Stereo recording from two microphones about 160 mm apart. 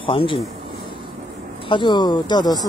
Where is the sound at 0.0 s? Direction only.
35° left (ahead or behind).